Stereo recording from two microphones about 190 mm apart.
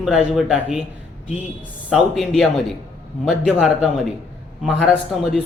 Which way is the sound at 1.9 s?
Centre (ahead or behind).